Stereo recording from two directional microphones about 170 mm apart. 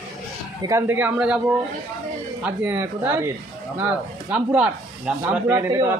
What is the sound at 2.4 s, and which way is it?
A man's voice, 10° right (ahead or behind).